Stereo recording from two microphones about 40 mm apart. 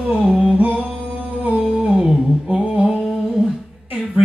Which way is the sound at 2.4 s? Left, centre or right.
Right.